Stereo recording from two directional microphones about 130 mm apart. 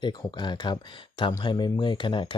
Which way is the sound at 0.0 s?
35° left (ahead or behind).